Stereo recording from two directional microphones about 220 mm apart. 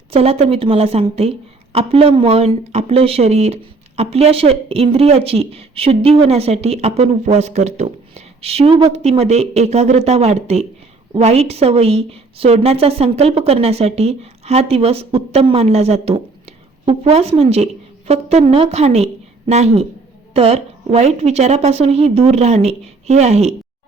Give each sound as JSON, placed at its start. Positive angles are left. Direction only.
{"t": 0.1, "sound": "speech", "side_deg": -25}